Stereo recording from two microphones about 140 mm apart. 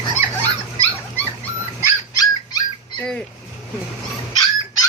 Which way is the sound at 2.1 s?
30° left (ahead or behind).